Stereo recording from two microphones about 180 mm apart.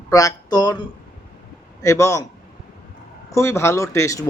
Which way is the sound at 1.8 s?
15° left (ahead or behind).